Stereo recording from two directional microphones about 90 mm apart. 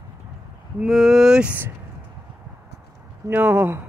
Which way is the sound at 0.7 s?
5° right (ahead or behind).